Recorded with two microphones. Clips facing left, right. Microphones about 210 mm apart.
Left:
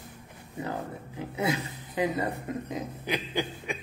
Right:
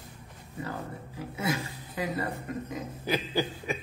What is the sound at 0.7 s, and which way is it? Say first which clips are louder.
Speech: left 3 dB; 20° left (ahead or behind).